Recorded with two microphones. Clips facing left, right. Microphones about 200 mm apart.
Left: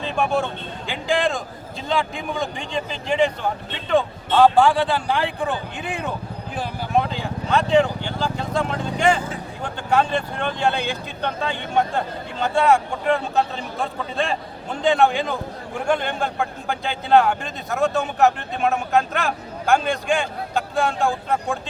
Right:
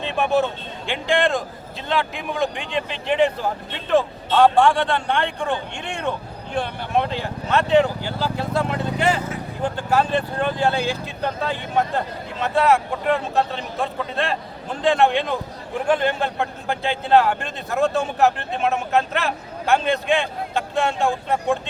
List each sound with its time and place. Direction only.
0.0 s speech: centre (ahead or behind)
9.1 s speech: 30° left (ahead or behind)
9.7 s speech: 5° right (ahead or behind)